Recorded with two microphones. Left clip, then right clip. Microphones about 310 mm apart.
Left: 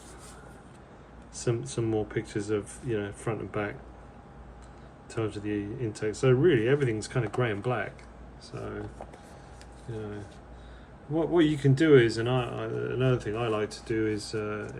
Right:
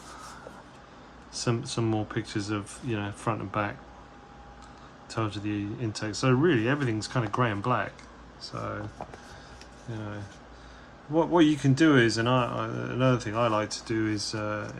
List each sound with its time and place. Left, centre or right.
1.3 s speech: centre
5.0 s speech: centre
11.2 s speech: centre